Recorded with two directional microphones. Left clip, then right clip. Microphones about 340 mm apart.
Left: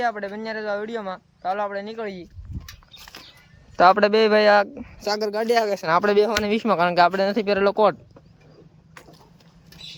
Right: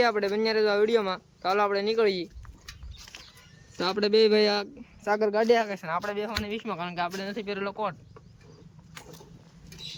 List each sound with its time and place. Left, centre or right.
0.0 s speech: centre
3.8 s speech: centre
5.0 s speech: centre
5.5 s speech: centre